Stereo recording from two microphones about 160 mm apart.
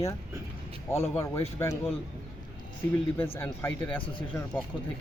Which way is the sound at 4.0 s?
30° left (ahead or behind).